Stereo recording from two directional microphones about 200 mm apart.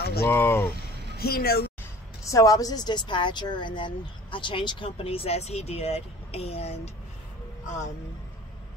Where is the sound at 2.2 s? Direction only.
15° left (ahead or behind).